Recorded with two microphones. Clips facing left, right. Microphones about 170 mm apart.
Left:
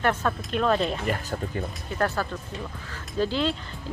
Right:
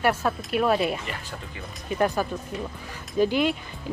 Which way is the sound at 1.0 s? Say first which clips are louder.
Left 7 dB; 45° left (ahead or behind).